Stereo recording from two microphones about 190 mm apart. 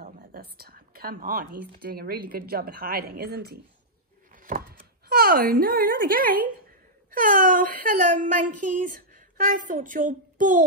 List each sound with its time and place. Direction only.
0.0 s whispering: 50° right (ahead or behind)
1.8 s speech: 50° right (ahead or behind)
4.4 s door: 45° right (ahead or behind)
5.1 s speech: 50° right (ahead or behind)